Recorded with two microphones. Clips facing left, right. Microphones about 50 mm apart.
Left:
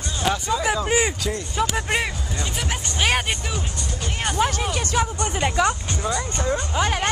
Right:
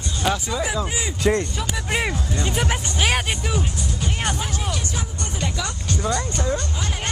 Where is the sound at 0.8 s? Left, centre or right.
Left.